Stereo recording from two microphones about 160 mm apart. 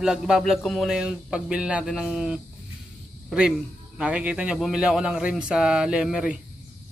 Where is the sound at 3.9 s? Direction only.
5° right (ahead or behind).